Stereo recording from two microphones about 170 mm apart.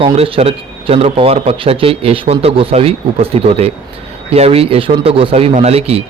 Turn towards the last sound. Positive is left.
turn(degrees=-35)  # may be behind; listen again after turning